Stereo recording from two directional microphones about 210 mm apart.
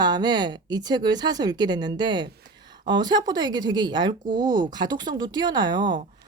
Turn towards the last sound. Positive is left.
turn(degrees=-20)  # may be behind; listen again after turning